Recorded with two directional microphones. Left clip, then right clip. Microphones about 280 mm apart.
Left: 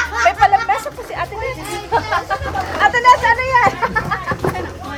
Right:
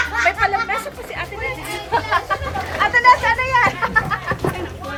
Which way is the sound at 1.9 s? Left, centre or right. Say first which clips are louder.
Left 1 dB; left.